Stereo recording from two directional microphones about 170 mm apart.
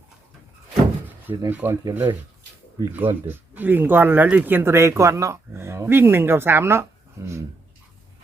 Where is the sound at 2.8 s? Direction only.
10° right (ahead or behind).